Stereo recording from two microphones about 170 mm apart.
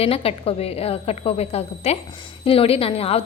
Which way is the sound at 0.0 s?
35° left (ahead or behind).